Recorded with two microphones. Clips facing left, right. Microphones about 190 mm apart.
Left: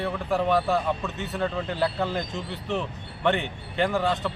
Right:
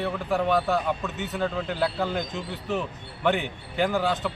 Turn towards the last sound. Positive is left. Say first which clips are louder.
# even
turn(degrees=0)  # may be behind; listen again after turning